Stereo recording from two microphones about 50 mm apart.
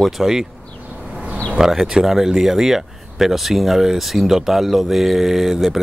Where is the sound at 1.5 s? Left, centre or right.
Centre.